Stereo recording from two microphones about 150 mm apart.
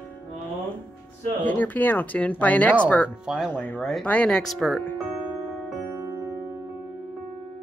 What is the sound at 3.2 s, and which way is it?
Speech, 5° right (ahead or behind).